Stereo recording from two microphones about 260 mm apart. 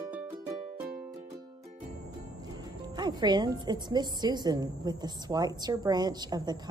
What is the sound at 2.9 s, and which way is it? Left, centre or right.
A woman's voice, centre.